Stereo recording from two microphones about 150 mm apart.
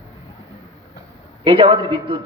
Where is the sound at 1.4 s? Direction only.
35° right (ahead or behind).